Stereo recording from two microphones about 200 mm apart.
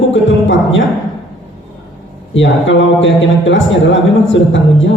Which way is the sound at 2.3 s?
70° left (ahead or behind).